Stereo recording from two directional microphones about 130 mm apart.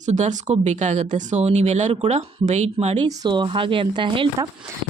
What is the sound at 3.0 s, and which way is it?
Speech, 35° right (ahead or behind).